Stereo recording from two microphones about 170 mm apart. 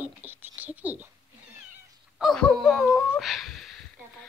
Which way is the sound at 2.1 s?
Centre (ahead or behind).